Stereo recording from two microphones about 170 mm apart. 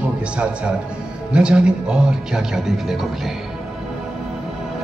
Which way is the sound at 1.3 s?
5° right (ahead or behind).